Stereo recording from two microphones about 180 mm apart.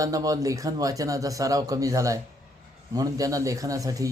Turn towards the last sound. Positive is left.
turn(degrees=-20)  # may be behind; listen again after turning